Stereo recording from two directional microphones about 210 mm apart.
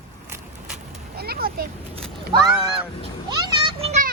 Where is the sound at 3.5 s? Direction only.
25° right (ahead or behind).